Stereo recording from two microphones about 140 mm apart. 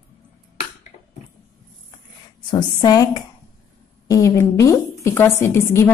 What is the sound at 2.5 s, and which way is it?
A woman's voice, 30° left (ahead or behind).